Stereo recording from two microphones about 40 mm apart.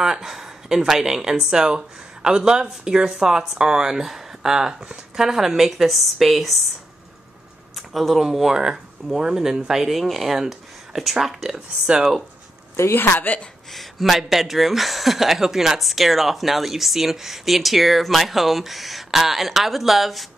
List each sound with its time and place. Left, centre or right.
0.0 s speech: centre
7.7 s a sound: centre
8.3 s speech: centre
9.8 s speech: centre
13.3 s speech: left
13.7 s speech: centre